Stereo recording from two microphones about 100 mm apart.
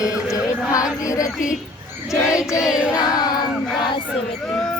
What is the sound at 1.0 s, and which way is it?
Child singing, 35° left (ahead or behind).